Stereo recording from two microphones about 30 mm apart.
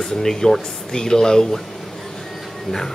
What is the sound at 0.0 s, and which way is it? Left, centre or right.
Speech, centre.